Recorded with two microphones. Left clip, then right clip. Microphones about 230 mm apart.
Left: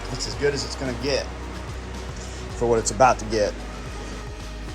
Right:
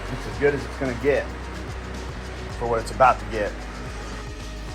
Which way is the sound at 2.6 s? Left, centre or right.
Left.